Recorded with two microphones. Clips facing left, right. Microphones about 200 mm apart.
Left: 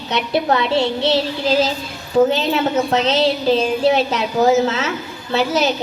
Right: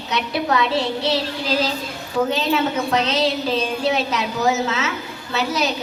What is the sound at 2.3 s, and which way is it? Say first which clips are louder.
A woman's voice: left 3 dB; 30° left (ahead or behind).